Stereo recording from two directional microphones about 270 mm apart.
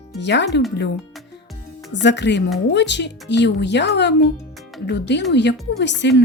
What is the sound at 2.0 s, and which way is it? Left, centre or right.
A woman's voice, left.